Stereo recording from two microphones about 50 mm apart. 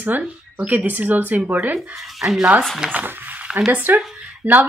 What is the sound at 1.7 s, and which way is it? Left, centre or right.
Speech, centre.